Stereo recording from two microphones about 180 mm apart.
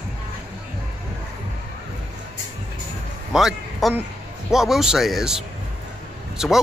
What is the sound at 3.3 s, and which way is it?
A man's voice, centre (ahead or behind).